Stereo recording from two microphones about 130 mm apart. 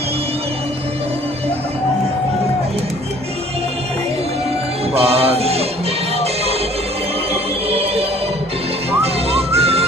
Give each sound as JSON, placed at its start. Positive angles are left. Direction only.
{"t": 4.9, "sound": "music", "side_deg": -50}
{"t": 7.7, "sound": "music", "side_deg": -50}
{"t": 9.0, "sound": "music", "side_deg": -50}